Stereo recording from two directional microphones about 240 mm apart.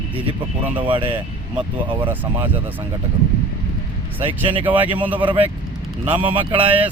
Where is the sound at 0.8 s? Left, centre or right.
Right.